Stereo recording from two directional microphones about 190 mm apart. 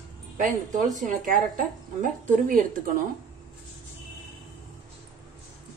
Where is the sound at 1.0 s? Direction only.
45° right (ahead or behind).